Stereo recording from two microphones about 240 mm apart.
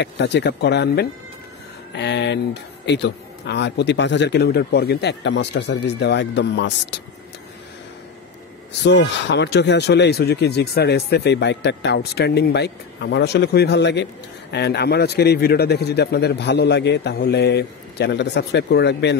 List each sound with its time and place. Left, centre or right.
0.0 s speech: left
8.8 s speech: left